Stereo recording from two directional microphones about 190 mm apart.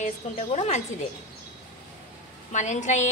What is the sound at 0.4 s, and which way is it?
Speech, 35° left (ahead or behind).